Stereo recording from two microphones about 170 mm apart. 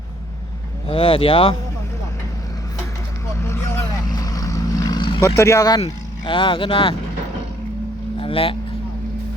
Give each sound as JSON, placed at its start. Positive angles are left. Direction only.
{"t": 0.9, "sound": "speech", "side_deg": 30}
{"t": 3.4, "sound": "vehicle", "side_deg": 15}
{"t": 5.4, "sound": "speech", "side_deg": 20}
{"t": 8.2, "sound": "speech", "side_deg": 30}